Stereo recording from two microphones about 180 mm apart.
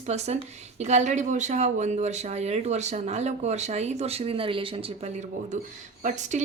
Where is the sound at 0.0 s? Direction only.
40° right (ahead or behind).